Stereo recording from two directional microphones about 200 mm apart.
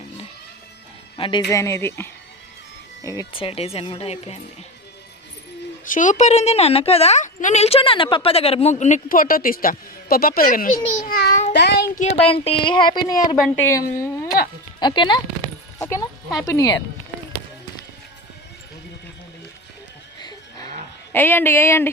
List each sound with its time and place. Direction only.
1.1 s speech: 25° left (ahead or behind)
5.8 s a woman's voice: 40° left (ahead or behind)
11.5 s child singing: 55° left (ahead or behind)
11.9 s a woman's voice: 30° left (ahead or behind)
20.1 s livestock: 20° left (ahead or behind)
21.1 s speech: 10° left (ahead or behind)